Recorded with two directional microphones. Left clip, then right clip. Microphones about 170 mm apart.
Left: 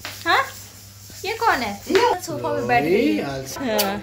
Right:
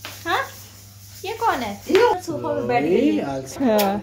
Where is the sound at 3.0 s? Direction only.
25° right (ahead or behind).